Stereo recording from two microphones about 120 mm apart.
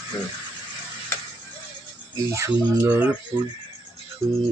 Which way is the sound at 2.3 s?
25° right (ahead or behind).